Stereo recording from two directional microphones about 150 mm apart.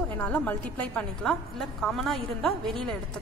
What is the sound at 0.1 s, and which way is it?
A woman's voice, 10° left (ahead or behind).